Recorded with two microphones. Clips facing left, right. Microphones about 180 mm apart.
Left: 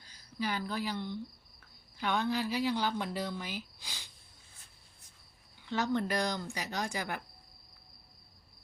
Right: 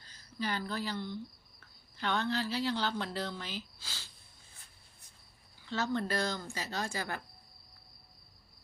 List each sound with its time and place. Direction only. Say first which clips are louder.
0.0 s speech: left 1 dB; 10° left (ahead or behind)
5.6 s speech: left 2 dB; 15° left (ahead or behind)